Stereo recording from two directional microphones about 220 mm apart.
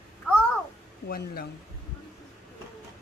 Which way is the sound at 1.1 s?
45° left (ahead or behind).